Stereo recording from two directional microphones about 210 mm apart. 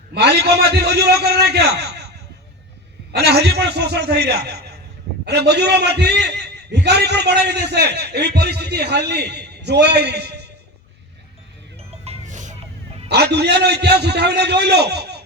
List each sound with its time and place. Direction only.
0.1 s a man's voice: 50° right (ahead or behind)
3.1 s a man's voice: 50° right (ahead or behind)
11.8 s music: 30° right (ahead or behind)
13.1 s a man's voice: 50° right (ahead or behind)